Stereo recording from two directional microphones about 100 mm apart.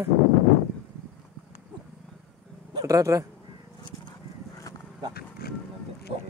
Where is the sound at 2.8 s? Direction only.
35° right (ahead or behind).